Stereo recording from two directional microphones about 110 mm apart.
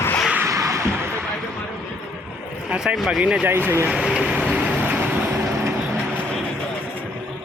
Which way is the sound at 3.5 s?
20° right (ahead or behind).